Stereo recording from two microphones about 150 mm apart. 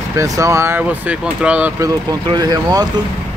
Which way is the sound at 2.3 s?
25° right (ahead or behind).